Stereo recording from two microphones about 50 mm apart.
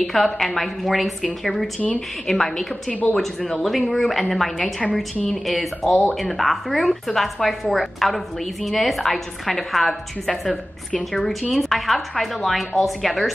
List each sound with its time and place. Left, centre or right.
0.0 s a woman's voice: centre
2.9 s speech: left
3.6 s speech: centre